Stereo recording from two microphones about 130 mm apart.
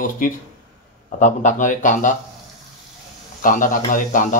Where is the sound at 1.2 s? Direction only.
70° left (ahead or behind).